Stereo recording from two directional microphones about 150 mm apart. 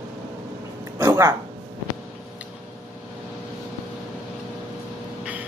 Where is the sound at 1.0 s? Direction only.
20° right (ahead or behind).